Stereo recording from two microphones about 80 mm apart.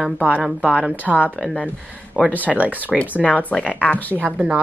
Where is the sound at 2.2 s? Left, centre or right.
Centre.